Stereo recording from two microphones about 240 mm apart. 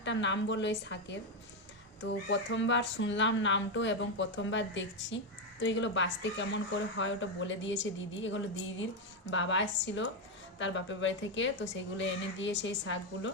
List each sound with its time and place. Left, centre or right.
0.0 s speech: left